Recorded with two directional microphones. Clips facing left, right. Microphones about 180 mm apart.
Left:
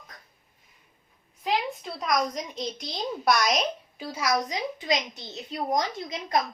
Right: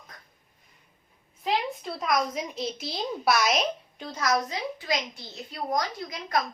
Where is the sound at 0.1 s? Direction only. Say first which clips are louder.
Even; centre (ahead or behind).